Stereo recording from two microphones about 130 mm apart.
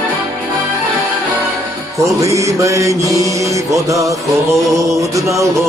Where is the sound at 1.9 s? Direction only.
25° right (ahead or behind).